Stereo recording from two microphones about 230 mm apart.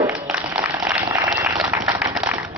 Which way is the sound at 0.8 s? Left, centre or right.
Centre.